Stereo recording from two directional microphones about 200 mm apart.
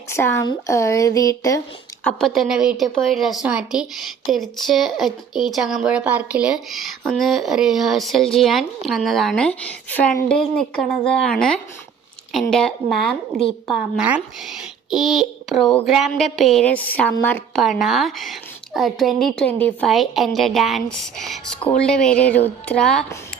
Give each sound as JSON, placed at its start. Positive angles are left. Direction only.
{"t": 0.1, "sound": "speech", "side_deg": 10}
{"t": 2.0, "sound": "speech", "side_deg": 0}